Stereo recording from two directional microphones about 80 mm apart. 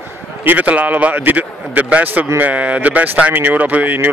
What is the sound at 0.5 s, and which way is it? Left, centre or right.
Speech, centre.